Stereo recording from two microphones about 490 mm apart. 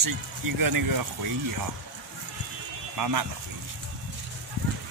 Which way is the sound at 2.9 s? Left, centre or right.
Right.